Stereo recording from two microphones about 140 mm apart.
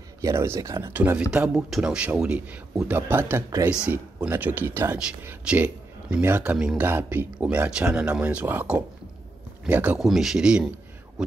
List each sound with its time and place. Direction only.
0.2 s speech: 20° right (ahead or behind)
0.9 s speech: 10° right (ahead or behind)
3.9 s speech: 15° right (ahead or behind)